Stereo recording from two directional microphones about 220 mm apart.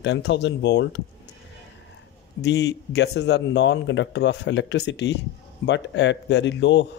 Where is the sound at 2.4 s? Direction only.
50° left (ahead or behind).